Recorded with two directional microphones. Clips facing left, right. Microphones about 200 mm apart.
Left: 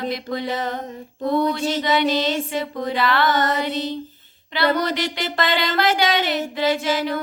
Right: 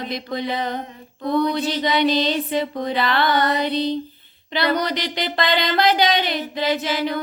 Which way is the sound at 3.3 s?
45° left (ahead or behind).